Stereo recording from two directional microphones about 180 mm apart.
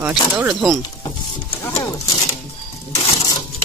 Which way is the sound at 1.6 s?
20° left (ahead or behind).